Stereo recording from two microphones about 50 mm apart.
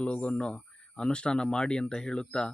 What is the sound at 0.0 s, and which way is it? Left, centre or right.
Speech, left.